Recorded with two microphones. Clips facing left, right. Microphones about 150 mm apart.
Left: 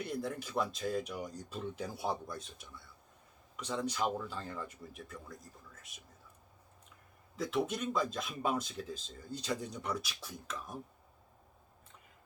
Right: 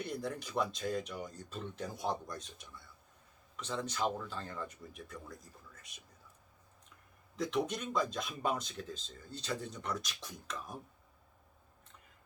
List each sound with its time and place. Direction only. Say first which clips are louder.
0.0 s speech: left 1 dB; centre (ahead or behind)
7.3 s speech: even; 5° left (ahead or behind)